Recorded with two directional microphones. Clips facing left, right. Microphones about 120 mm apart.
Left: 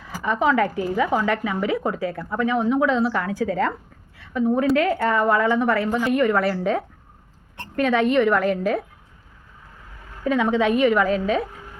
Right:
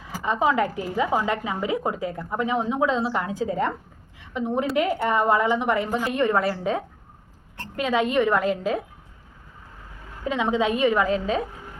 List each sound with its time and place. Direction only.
0.2 s a woman's voice: 20° right (ahead or behind)
10.2 s a woman's voice: 20° right (ahead or behind)